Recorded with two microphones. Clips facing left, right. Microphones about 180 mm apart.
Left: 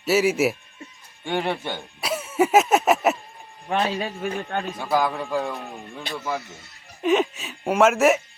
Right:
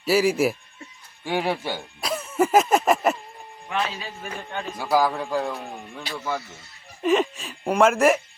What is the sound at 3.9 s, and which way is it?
Speech, 60° left (ahead or behind).